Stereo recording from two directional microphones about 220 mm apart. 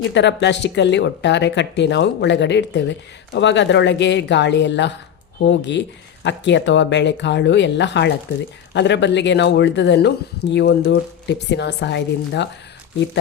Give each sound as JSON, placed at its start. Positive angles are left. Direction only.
{"t": 0.1, "sound": "a woman's voice", "side_deg": 50}